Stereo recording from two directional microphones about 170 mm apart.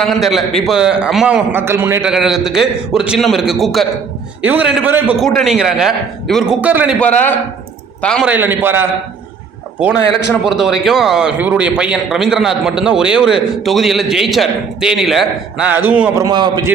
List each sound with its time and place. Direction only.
0.0 s a man's voice: centre (ahead or behind)
1.5 s a man's voice: 15° right (ahead or behind)
5.2 s a man's voice: centre (ahead or behind)
7.0 s a man's voice: 10° left (ahead or behind)
8.2 s a man's voice: 10° right (ahead or behind)
10.4 s a man's voice: centre (ahead or behind)
16.2 s a man's voice: 25° right (ahead or behind)